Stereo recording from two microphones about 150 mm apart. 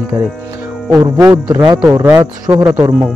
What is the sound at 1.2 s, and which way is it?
Speech, 25° right (ahead or behind).